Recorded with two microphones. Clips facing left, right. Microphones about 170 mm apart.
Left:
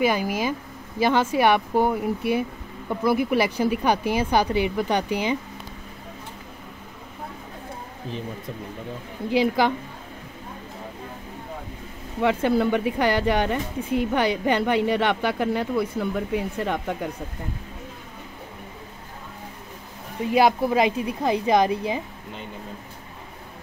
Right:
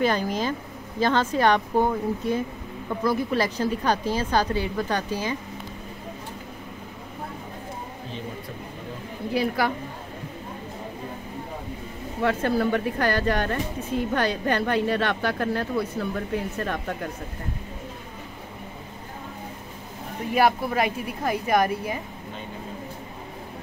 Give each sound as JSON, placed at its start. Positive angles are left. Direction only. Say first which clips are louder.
{"t": 0.0, "sound": "speech", "louder": "left 1 dB", "side_deg": 10}
{"t": 12.2, "sound": "speech", "louder": "left 2 dB", "side_deg": 15}
{"t": 20.3, "sound": "a woman's voice", "louder": "left 3 dB", "side_deg": 15}